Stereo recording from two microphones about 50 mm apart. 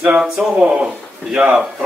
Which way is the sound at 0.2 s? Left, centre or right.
Centre.